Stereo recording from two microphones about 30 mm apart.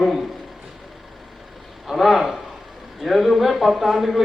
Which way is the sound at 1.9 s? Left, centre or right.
Centre.